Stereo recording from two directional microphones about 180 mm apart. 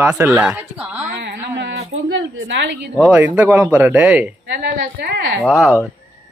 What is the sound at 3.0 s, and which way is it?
Speech, 5° right (ahead or behind).